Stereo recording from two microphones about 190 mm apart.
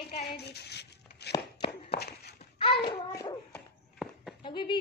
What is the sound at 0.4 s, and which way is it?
Speech, 60° left (ahead or behind).